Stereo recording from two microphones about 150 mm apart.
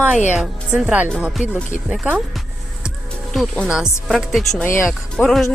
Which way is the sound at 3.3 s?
Centre (ahead or behind).